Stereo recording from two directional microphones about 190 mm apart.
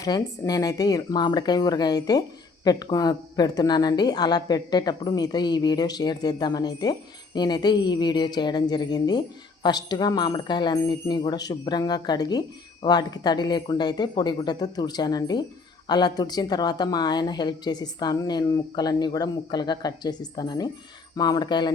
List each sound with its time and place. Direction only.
0.0 s speech: 20° left (ahead or behind)